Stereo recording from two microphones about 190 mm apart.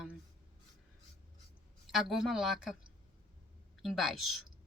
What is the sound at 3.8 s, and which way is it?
Speech, centre (ahead or behind).